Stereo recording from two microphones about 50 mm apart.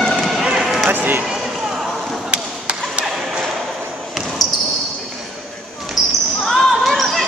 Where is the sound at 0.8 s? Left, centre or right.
Right.